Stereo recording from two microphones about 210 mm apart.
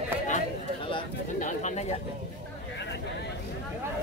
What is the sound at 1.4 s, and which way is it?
Bird, 35° left (ahead or behind).